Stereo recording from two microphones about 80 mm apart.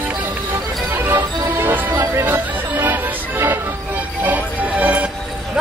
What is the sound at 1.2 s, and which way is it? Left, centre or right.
Music, right.